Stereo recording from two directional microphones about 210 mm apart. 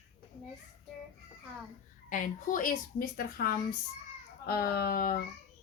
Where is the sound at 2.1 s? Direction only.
40° left (ahead or behind).